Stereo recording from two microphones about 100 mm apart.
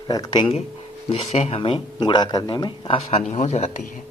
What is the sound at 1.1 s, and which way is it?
Speech, 90° left.